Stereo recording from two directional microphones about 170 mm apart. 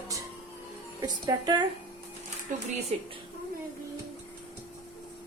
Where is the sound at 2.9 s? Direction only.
40° right (ahead or behind).